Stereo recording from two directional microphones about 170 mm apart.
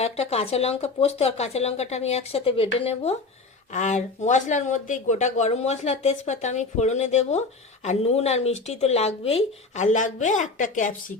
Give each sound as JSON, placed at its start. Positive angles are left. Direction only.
{"t": 0.0, "sound": "speech", "side_deg": 40}